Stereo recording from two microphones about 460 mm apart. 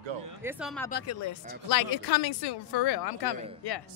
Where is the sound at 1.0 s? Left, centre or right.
Left.